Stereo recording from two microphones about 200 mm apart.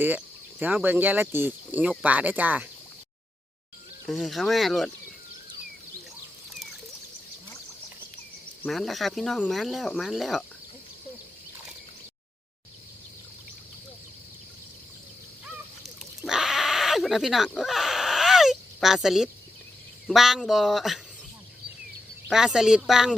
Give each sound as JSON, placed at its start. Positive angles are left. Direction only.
{"t": 0.6, "sound": "speech", "side_deg": -10}
{"t": 4.0, "sound": "speech", "side_deg": 0}
{"t": 8.6, "sound": "speech", "side_deg": 0}
{"t": 16.2, "sound": "bleat", "side_deg": 0}
{"t": 20.1, "sound": "speech", "side_deg": 0}
{"t": 22.3, "sound": "speech", "side_deg": 0}